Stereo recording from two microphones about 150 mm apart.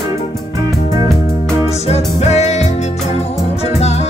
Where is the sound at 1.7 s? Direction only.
45° left (ahead or behind).